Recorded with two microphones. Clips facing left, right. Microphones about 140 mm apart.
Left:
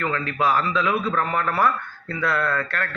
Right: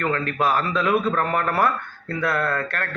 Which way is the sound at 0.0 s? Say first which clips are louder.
Right 1 dB; 45° right (ahead or behind).